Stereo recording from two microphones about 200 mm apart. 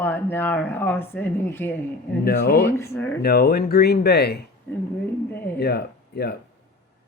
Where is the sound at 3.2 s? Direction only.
50° left (ahead or behind).